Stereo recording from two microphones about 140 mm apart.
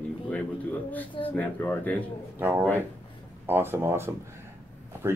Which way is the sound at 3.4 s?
15° right (ahead or behind).